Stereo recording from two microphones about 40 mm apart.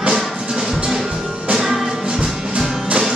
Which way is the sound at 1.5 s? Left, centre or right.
Centre.